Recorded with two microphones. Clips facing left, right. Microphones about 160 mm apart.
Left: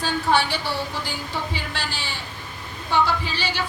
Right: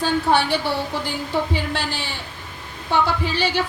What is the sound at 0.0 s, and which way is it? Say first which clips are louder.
A woman's voice: right 3 dB; 55° right (ahead or behind).